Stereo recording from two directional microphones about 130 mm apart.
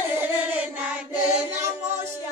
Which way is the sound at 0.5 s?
10° right (ahead or behind).